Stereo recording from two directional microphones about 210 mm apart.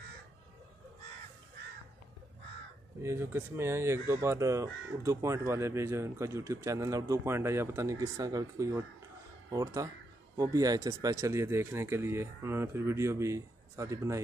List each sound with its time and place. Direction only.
3.0 s speech: 10° right (ahead or behind)